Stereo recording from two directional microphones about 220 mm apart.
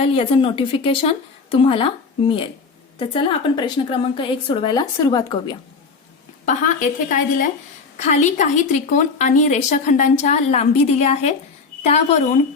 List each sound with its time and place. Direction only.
0.0 s a woman's voice: 25° left (ahead or behind)
6.4 s a woman's voice: 35° left (ahead or behind)